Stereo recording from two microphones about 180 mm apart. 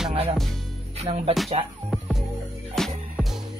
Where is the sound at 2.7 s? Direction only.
Centre (ahead or behind).